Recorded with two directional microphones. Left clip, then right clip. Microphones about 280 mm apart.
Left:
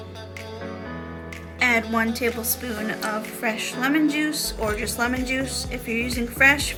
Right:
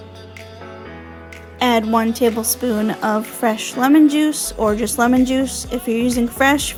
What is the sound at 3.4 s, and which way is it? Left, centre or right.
A woman's voice, centre.